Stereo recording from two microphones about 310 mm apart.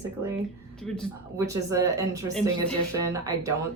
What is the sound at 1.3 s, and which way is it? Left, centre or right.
Speech, centre.